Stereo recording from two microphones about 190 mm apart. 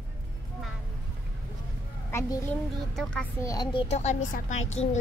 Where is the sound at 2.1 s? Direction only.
15° left (ahead or behind).